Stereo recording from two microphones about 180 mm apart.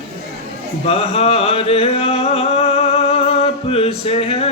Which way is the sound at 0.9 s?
35° left (ahead or behind).